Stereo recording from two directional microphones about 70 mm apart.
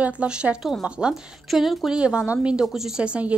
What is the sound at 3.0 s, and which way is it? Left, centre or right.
Speech, centre.